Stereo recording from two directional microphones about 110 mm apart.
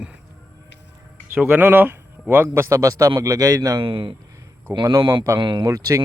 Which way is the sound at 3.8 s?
50° right (ahead or behind).